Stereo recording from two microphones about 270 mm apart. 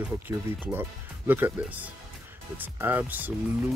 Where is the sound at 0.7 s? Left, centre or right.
Centre.